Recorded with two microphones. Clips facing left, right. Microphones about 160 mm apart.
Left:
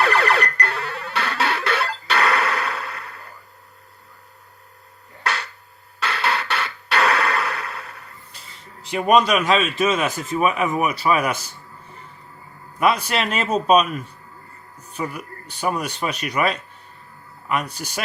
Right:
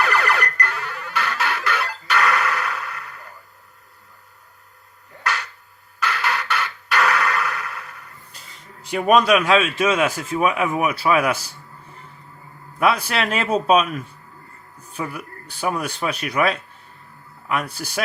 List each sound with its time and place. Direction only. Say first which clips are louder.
0.0 s music: left 2 dB; 30° left (ahead or behind)
6.0 s a sound: left 1 dB; 30° left (ahead or behind)
9.0 s a man's voice: right 1 dB; 5° right (ahead or behind)
12.8 s a man's voice: even; centre (ahead or behind)
15.6 s a man's voice: even; 5° right (ahead or behind)